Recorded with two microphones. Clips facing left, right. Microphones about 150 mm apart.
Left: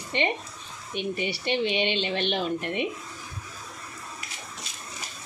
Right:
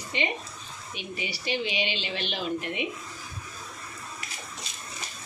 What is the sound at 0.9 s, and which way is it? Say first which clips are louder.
Speech: left 7 dB; 55° left (ahead or behind).